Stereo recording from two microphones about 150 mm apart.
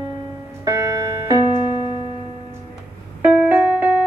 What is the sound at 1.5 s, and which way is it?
Music, 35° left (ahead or behind).